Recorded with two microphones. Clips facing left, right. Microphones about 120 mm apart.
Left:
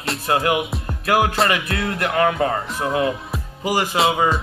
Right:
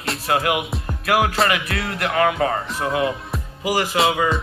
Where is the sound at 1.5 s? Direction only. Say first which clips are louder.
Left 1 dB; 30° left (ahead or behind).